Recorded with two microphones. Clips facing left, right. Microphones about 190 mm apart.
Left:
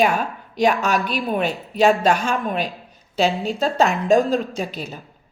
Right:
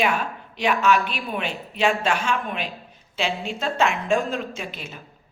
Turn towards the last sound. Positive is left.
turn(degrees=40)  # may be behind; listen again after turning